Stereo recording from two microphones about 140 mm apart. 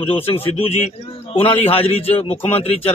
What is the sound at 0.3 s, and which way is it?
A man's voice, 45° left (ahead or behind).